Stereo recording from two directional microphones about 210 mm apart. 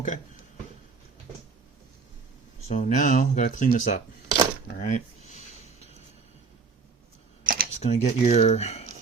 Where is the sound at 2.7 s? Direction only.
35° left (ahead or behind).